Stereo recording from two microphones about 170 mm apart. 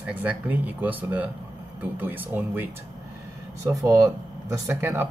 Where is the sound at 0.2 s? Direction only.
10° right (ahead or behind).